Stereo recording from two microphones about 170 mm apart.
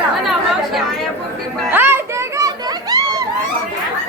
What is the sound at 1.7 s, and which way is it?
Children playing, 10° right (ahead or behind).